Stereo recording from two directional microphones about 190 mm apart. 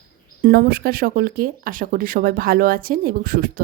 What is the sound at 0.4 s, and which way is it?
Speech, 50° right (ahead or behind).